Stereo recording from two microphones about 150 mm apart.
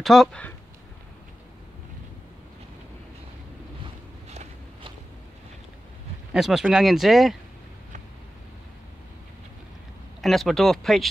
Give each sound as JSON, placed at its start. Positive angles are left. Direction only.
{"t": 0.0, "sound": "speech", "side_deg": 0}
{"t": 3.8, "sound": "a sound", "side_deg": -45}
{"t": 6.3, "sound": "speech", "side_deg": -5}
{"t": 10.2, "sound": "speech", "side_deg": 0}